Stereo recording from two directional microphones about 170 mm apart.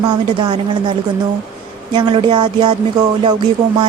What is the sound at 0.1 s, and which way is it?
Music, 25° right (ahead or behind).